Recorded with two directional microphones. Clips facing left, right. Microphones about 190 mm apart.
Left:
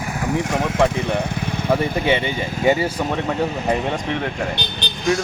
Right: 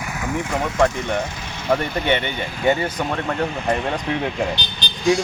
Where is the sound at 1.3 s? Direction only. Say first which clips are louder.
Left 9 dB; 60° left (ahead or behind).